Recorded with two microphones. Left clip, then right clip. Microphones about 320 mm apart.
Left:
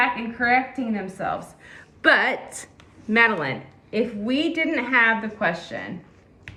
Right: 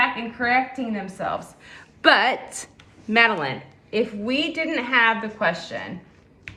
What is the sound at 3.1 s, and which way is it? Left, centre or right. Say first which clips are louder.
A woman's voice: right 1 dB; centre.